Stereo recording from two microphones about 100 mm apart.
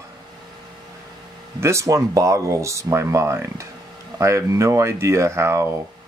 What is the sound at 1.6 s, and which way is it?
Speech, 30° right (ahead or behind).